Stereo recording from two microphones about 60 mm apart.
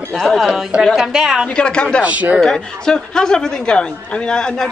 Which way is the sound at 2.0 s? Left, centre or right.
Right.